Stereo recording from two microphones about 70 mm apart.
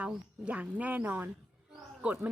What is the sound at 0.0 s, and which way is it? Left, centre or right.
Speech, centre.